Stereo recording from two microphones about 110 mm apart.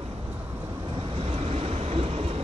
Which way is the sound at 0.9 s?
55° right (ahead or behind).